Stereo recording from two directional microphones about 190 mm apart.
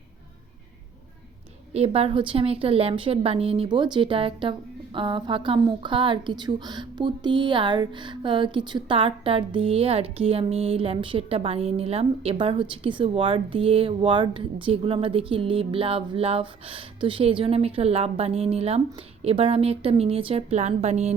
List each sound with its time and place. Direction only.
1.7 s a woman's voice: 30° right (ahead or behind)